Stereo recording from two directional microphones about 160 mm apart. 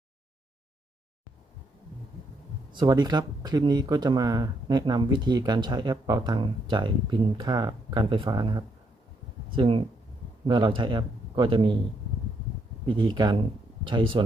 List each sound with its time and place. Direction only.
2.7 s speech: 25° right (ahead or behind)
12.8 s speech: 30° right (ahead or behind)